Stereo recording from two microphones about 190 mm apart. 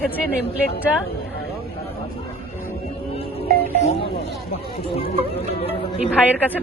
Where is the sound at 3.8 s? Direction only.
35° left (ahead or behind).